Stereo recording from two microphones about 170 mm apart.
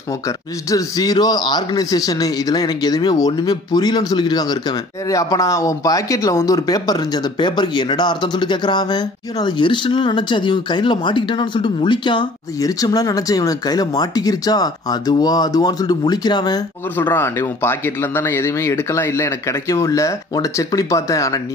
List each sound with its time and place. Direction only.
0.7 s speech: 20° left (ahead or behind)
16.9 s speech: 10° left (ahead or behind)